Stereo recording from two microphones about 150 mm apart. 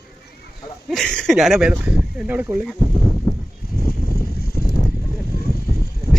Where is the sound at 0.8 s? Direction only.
Centre (ahead or behind).